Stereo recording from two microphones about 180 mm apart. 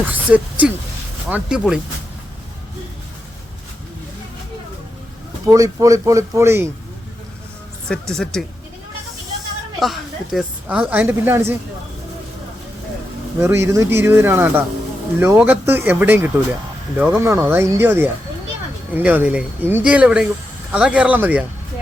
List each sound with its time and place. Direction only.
0.1 s speech: 10° right (ahead or behind)
5.5 s a woman's voice: 20° right (ahead or behind)
7.9 s speech: 5° left (ahead or behind)
9.8 s a woman's voice: centre (ahead or behind)
13.4 s a woman's voice: 15° right (ahead or behind)